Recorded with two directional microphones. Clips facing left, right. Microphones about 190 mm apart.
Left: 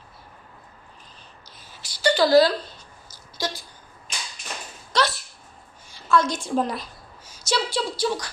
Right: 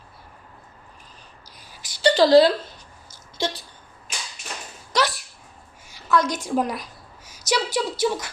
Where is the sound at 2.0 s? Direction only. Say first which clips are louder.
Right 2 dB; 30° right (ahead or behind).